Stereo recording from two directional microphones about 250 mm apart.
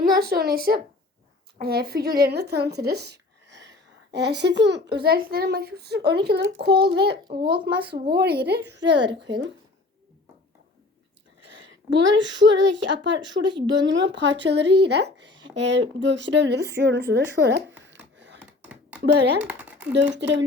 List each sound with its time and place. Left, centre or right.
0.2 s speech: right
7.4 s speech: centre
7.8 s speech: right
11.3 s a sound: right
11.9 s speech: right
13.4 s a woman's voice: centre
14.0 s speech: right
18.3 s a sound: centre
19.9 s speech: right